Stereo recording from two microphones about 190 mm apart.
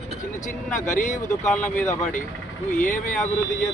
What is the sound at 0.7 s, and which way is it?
Speech, 40° left (ahead or behind).